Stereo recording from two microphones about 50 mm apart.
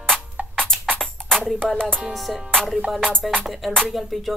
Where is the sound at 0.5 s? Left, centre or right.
Centre.